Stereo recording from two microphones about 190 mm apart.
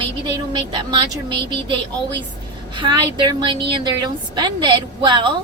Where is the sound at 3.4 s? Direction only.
25° right (ahead or behind).